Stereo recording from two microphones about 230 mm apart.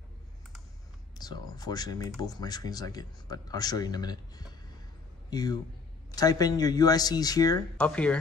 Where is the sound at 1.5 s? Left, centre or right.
Centre.